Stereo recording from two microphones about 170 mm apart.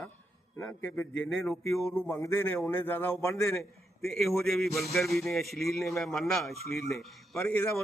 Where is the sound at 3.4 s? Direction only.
Centre (ahead or behind).